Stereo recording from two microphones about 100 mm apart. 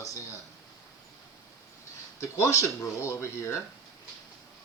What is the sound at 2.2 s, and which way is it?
Speech, 30° left (ahead or behind).